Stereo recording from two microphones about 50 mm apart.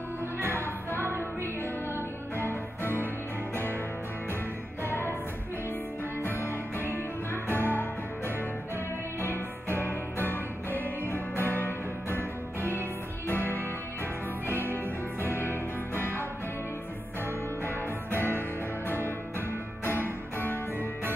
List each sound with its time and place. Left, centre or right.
2.3 s music: left
4.8 s music: left
6.3 s music: right
7.4 s music: left
9.8 s music: left
15.3 s music: left
17.6 s music: left
19.8 s music: left